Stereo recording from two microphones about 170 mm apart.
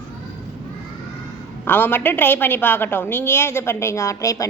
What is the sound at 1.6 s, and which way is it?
A woman's voice, 10° left (ahead or behind).